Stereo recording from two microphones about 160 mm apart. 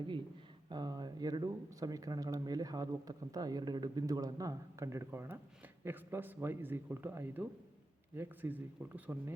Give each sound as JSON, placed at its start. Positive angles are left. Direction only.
{"t": 0.7, "sound": "a man's voice", "side_deg": -25}